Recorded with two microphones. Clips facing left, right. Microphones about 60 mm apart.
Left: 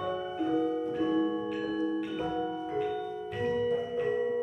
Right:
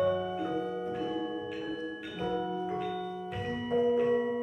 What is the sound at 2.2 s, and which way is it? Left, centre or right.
Music, centre.